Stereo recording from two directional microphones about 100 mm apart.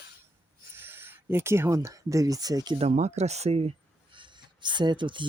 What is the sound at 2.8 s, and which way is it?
Speech, 90° right.